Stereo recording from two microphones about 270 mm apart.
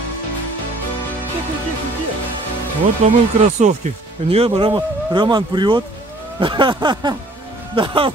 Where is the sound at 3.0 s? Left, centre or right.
Right.